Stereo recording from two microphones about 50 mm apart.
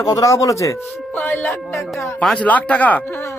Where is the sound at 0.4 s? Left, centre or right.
Left.